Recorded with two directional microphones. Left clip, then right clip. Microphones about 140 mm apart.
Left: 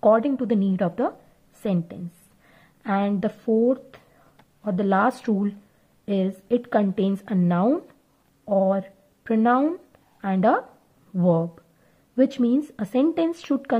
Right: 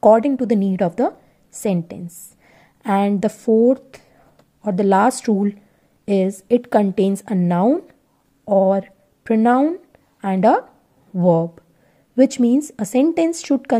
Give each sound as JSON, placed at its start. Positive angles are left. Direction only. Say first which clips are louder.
{"t": 0.0, "sound": "a woman's voice", "louder": "right 6 dB", "side_deg": -35}